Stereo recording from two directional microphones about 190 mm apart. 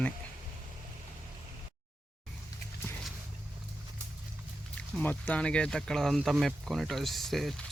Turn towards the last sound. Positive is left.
turn(degrees=0)  # may be behind; listen again after turning